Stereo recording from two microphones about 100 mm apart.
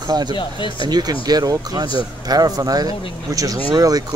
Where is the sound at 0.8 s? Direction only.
45° right (ahead or behind).